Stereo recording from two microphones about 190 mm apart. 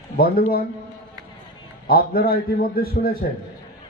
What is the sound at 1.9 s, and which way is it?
A man's voice, 50° left (ahead or behind).